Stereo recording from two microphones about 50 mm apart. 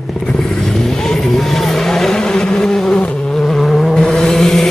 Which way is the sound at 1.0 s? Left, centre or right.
Centre.